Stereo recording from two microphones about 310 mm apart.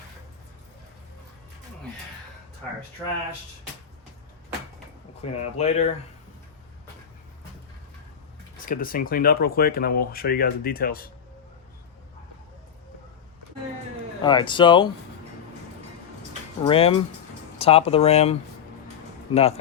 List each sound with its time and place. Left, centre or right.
5.2 s speech: left
8.6 s speech: left
14.2 s speech: centre
16.6 s speech: centre